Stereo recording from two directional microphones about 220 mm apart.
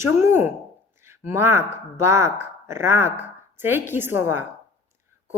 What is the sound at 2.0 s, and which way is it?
A woman's voice, 10° right (ahead or behind).